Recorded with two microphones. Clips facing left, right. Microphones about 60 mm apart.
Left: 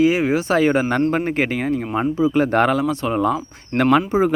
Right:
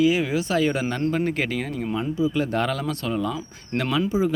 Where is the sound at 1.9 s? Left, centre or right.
Left.